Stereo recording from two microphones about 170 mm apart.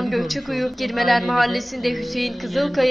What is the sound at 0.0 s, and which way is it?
A woman's voice, centre (ahead or behind).